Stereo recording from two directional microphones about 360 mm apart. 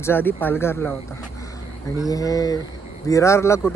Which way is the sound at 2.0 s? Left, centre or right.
Centre.